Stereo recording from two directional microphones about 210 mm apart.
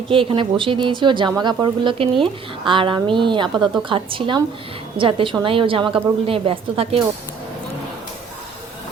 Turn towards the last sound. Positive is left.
turn(degrees=-25)  # may be behind; listen again after turning